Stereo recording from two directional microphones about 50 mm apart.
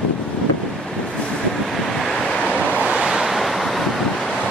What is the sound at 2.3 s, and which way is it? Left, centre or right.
Waves, left.